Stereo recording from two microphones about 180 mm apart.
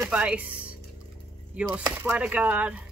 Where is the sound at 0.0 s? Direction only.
5° right (ahead or behind).